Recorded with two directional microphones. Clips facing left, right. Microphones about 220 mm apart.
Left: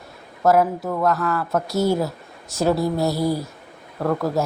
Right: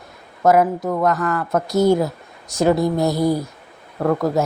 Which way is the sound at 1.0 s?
Centre (ahead or behind).